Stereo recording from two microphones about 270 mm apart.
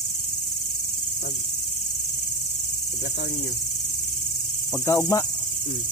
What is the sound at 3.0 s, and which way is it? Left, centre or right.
Cricket, left.